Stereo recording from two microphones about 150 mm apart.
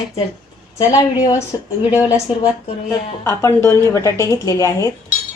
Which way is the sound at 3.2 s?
20° left (ahead or behind).